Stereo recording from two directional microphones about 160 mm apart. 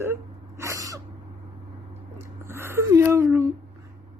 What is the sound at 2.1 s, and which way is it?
Speech, 15° right (ahead or behind).